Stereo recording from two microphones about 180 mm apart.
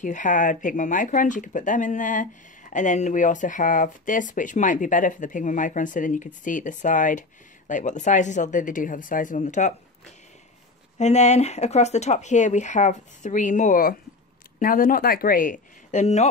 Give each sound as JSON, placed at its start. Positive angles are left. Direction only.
{"t": 0.0, "sound": "speech", "side_deg": 45}